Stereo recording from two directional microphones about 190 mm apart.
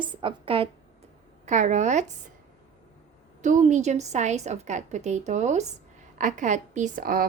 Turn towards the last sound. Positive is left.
turn(degrees=-50)  # may be behind; listen again after turning